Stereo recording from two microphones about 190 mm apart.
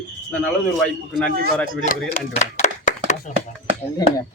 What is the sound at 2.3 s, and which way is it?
Clapping, 35° left (ahead or behind).